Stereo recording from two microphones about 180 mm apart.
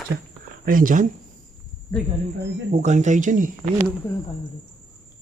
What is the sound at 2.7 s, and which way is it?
Speech, 40° right (ahead or behind).